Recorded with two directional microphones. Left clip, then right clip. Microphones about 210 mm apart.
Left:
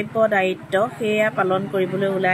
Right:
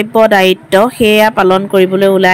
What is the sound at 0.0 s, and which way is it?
Speech, 45° right (ahead or behind).